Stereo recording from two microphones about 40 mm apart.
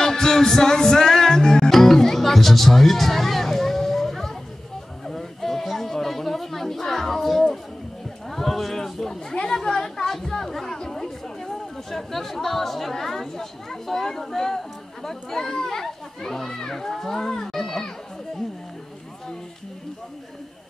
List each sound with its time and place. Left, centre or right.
0.0 s music: centre
5.0 s a sound: centre
9.3 s chatter: left
15.0 s children playing: centre